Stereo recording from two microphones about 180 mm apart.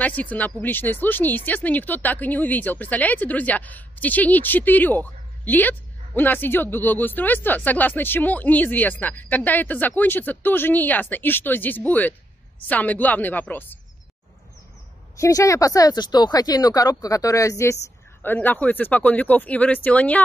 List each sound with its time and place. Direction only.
0.0 s speech: 10° left (ahead or behind)
15.1 s speech: 15° left (ahead or behind)